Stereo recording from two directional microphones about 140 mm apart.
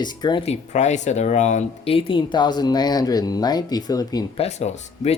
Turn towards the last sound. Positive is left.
turn(degrees=50)  # may be behind; listen again after turning